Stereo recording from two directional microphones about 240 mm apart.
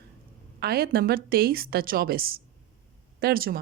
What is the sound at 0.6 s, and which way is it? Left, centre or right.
Speech, right.